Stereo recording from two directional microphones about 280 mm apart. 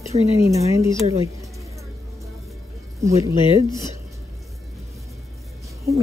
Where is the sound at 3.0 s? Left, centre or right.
Centre.